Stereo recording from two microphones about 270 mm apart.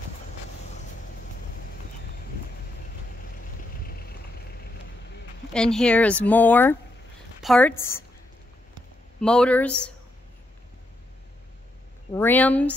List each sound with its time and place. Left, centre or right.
3.8 s vehicle: left
5.5 s a woman's voice: centre
9.2 s speech: centre
12.1 s speech: centre